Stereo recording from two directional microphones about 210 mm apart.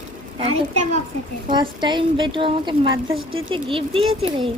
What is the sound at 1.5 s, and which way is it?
A woman's voice, 20° right (ahead or behind).